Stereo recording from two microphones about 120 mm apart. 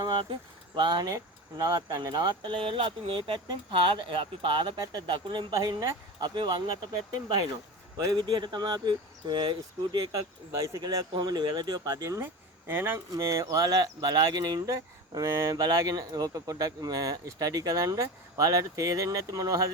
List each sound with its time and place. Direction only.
0.1 s a sound: 45° right (ahead or behind)
0.8 s speech: 40° right (ahead or behind)
7.9 s speech: 35° right (ahead or behind)
10.7 s speech: 30° right (ahead or behind)